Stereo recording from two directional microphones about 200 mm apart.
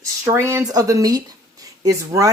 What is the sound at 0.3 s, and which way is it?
Speech, 15° right (ahead or behind).